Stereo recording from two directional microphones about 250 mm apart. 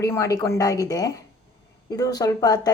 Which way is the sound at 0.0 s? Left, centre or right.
Centre.